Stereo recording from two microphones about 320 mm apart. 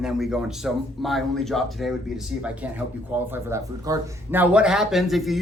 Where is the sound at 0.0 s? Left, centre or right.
Centre.